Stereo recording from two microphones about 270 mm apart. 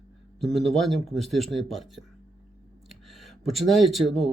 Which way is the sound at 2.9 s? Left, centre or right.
Centre.